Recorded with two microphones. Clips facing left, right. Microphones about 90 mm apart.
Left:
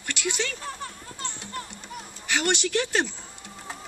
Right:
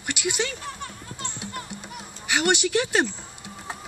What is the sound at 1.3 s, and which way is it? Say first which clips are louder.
Music: right 2 dB; 10° right (ahead or behind).